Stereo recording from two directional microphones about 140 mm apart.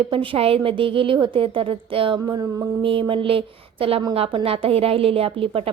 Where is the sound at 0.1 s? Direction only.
40° right (ahead or behind).